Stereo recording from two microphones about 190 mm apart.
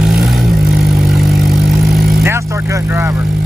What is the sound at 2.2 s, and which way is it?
Vehicle, 15° right (ahead or behind).